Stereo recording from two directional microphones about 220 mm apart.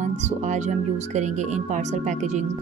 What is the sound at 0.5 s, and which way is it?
Speech, 35° right (ahead or behind).